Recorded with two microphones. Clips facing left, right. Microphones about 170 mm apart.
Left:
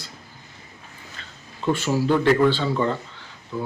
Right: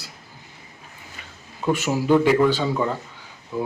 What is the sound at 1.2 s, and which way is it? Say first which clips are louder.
Speech: right 2 dB; 10° right (ahead or behind).